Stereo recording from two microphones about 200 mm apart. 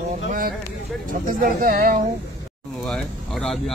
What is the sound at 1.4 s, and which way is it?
Speech, 45° right (ahead or behind).